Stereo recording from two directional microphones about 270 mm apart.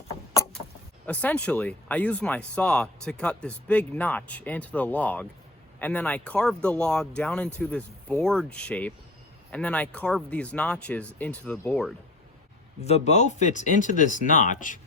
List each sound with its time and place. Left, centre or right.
1.0 s speech: centre
12.8 s speech: left